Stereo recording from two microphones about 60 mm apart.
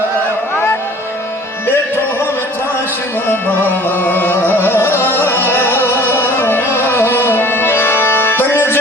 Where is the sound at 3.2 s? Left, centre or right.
Left.